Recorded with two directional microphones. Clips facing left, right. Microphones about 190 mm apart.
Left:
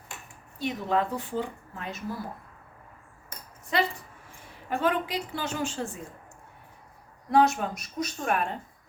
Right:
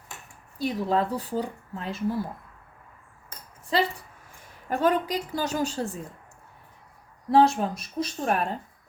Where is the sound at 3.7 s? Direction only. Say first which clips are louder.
Right 2 dB; 30° right (ahead or behind).